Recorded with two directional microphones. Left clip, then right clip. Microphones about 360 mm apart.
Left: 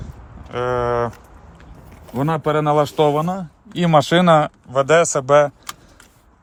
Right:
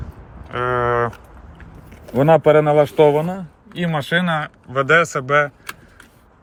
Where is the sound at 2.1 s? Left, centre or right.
Centre.